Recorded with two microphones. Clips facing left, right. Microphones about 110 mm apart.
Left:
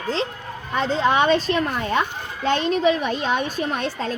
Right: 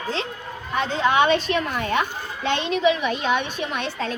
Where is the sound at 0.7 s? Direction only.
35° left (ahead or behind).